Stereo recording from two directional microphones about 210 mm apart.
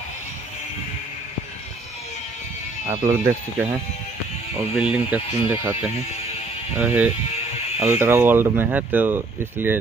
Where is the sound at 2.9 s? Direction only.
15° right (ahead or behind).